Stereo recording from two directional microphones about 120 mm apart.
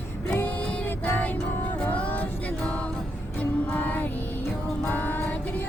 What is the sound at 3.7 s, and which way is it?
Music, 15° left (ahead or behind).